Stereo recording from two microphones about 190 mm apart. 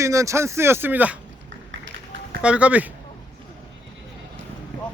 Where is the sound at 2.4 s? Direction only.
5° right (ahead or behind).